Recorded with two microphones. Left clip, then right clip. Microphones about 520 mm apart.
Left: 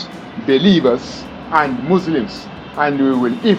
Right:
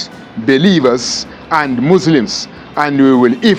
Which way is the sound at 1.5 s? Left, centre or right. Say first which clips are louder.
Right 3 dB; right.